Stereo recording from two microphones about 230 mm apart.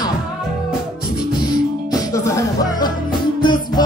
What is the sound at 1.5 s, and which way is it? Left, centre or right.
Music, centre.